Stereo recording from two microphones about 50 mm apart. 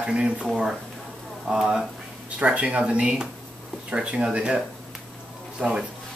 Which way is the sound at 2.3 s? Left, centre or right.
Right.